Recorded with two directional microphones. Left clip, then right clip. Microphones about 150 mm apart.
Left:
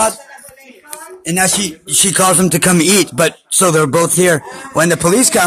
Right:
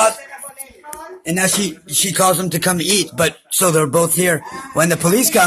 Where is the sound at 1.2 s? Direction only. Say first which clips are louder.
Left 3 dB; 65° left (ahead or behind); by 5.4 s 25° left (ahead or behind).